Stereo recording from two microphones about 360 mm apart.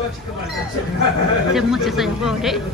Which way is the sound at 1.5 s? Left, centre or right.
Centre.